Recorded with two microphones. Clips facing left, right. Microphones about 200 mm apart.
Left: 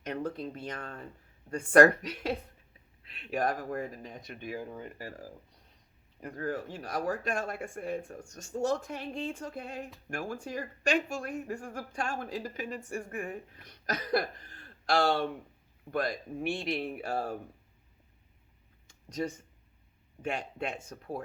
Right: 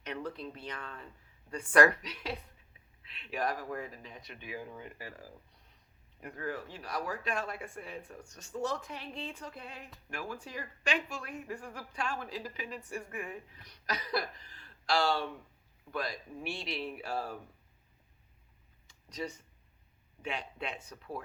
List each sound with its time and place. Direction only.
0.0 s speech: 45° left (ahead or behind)
18.9 s a sound: 50° left (ahead or behind)
20.2 s speech: 50° left (ahead or behind)